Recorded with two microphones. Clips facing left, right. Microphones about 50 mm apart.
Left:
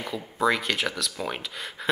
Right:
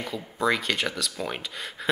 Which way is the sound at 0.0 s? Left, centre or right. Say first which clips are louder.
Left 2 dB; centre.